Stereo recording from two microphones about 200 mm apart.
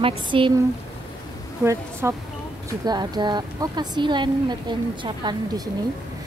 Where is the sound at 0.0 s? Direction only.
25° right (ahead or behind).